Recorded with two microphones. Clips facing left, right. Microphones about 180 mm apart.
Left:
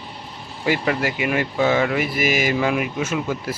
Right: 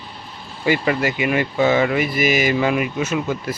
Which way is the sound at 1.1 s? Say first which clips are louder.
Right 2 dB; centre (ahead or behind).